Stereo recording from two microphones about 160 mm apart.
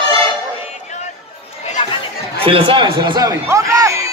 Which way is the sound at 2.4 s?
30° right (ahead or behind).